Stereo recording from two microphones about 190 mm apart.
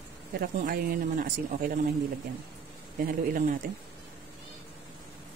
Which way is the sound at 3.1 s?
45° right (ahead or behind).